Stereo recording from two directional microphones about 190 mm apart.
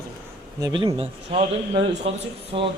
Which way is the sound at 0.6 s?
20° right (ahead or behind).